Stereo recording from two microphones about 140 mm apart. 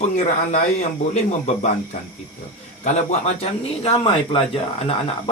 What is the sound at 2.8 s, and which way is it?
Speech, 55° left (ahead or behind).